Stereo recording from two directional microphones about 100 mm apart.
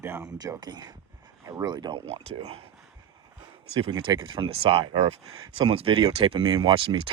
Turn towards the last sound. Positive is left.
turn(degrees=-60)  # may be behind; listen again after turning